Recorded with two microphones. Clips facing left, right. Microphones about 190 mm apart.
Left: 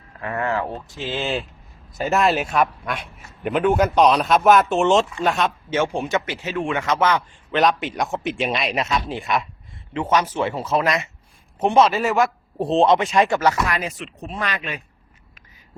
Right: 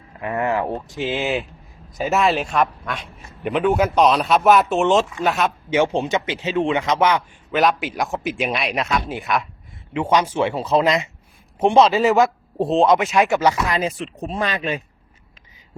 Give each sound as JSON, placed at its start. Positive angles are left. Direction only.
{"t": 0.2, "sound": "speech", "side_deg": -20}
{"t": 2.0, "sound": "a man's voice", "side_deg": 0}
{"t": 5.7, "sound": "speech", "side_deg": -20}
{"t": 7.2, "sound": "a man's voice", "side_deg": 0}
{"t": 9.9, "sound": "speech", "side_deg": -15}
{"t": 12.6, "sound": "a man's voice", "side_deg": 0}
{"t": 13.4, "sound": "speech", "side_deg": -15}
{"t": 13.8, "sound": "speech", "side_deg": -35}